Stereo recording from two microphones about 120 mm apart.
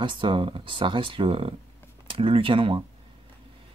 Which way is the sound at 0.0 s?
45° right (ahead or behind).